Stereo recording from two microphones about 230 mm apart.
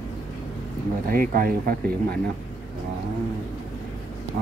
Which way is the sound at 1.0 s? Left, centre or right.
Right.